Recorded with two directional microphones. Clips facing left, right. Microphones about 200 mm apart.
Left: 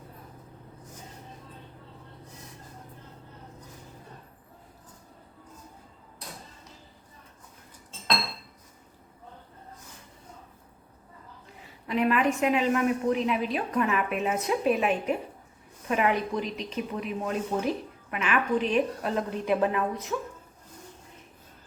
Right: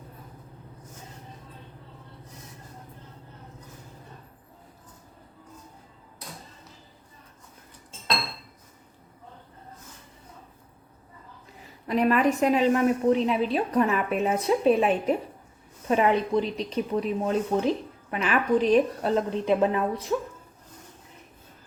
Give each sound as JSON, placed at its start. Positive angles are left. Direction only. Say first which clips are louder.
{"t": 11.9, "sound": "a woman's voice", "louder": "right 3 dB", "side_deg": -40}